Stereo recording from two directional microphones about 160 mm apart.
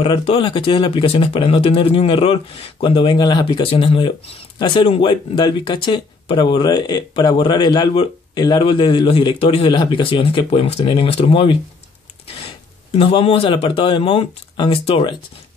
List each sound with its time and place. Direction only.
0.0 s speech: 35° left (ahead or behind)